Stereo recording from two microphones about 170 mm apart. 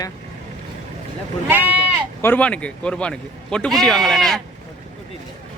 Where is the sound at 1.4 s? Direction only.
10° right (ahead or behind).